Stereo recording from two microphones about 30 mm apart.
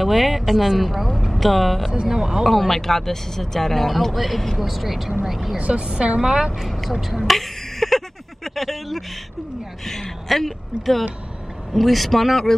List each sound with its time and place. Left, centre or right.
0.0 s speech: centre
2.1 s a woman's voice: centre
2.4 s speech: centre
5.6 s a woman's voice: right
6.6 s speech: centre
7.0 s speech: centre
7.2 s a sound: centre
8.5 s speech: centre
9.8 s speech: centre